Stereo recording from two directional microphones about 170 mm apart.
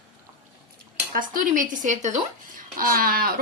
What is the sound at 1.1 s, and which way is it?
Speech, 50° right (ahead or behind).